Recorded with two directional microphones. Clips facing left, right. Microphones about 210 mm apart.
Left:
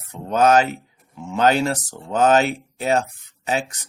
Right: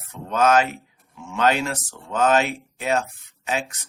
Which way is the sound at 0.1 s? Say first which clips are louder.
Left 3 dB; 35° left (ahead or behind).